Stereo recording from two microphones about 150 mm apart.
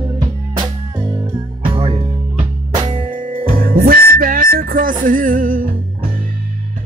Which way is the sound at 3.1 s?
65° right (ahead or behind).